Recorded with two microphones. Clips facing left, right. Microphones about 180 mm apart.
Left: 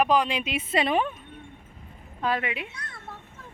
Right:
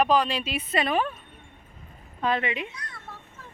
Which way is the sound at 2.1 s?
5° left (ahead or behind).